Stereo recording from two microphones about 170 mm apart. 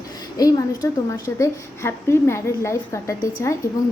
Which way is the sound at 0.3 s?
20° left (ahead or behind).